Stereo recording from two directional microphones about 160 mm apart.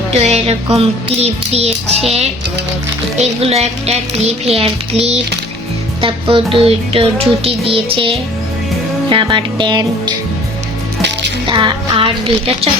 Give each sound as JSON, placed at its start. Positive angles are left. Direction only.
{"t": 0.1, "sound": "music", "side_deg": -40}
{"t": 3.2, "sound": "music", "side_deg": -40}
{"t": 9.0, "sound": "speech", "side_deg": -30}
{"t": 11.4, "sound": "music", "side_deg": -30}